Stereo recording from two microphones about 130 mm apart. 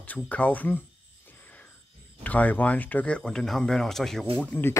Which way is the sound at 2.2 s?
10° left (ahead or behind).